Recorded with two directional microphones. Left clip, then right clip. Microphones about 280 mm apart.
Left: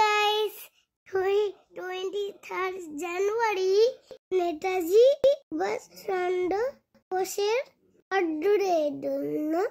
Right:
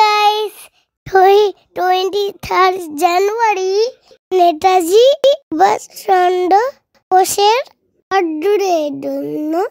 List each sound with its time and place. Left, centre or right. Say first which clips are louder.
0.0 s a child's voice: right 12 dB; right